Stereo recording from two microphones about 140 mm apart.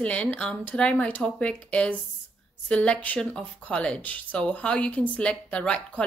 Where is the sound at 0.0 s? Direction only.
10° left (ahead or behind).